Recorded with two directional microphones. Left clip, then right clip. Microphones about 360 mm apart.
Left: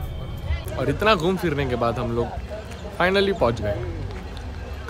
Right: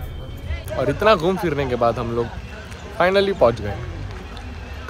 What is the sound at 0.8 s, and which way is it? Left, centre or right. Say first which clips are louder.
Speech: right 4 dB; centre.